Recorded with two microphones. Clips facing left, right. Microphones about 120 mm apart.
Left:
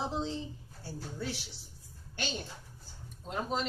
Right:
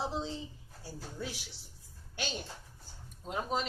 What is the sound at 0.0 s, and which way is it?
Speech, centre (ahead or behind).